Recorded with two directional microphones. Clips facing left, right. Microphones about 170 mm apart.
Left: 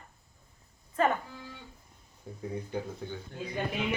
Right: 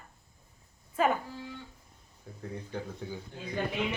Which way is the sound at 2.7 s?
Centre (ahead or behind).